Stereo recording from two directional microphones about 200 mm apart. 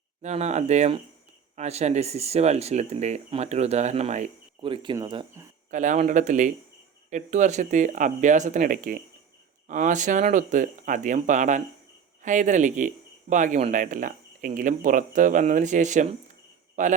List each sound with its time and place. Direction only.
0.2 s speech: 35° right (ahead or behind); by 5.5 s 20° right (ahead or behind)
5.7 s speech: 40° right (ahead or behind)